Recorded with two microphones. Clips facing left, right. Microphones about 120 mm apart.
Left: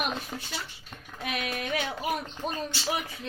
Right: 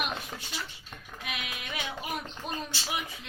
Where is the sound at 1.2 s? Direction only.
45° left (ahead or behind).